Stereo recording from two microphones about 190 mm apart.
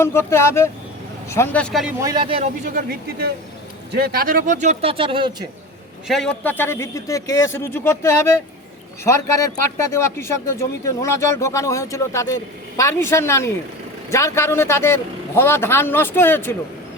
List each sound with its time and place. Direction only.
0.0 s a man's voice: 15° left (ahead or behind)
2.0 s speech: 20° right (ahead or behind)
2.6 s speech: 50° right (ahead or behind); by 5.5 s 25° right (ahead or behind)
6.1 s a man's voice: 5° left (ahead or behind)